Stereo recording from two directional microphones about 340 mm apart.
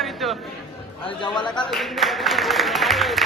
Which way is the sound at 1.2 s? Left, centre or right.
Centre.